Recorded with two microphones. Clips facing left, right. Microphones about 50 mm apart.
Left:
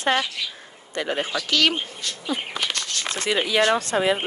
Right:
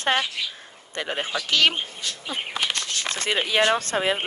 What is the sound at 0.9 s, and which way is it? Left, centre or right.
Speech, right.